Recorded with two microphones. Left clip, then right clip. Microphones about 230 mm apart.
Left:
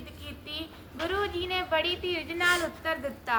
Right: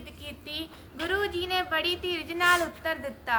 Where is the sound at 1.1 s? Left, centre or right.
Right.